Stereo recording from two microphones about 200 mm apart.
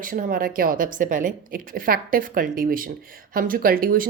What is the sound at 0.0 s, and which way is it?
Speech, 45° right (ahead or behind).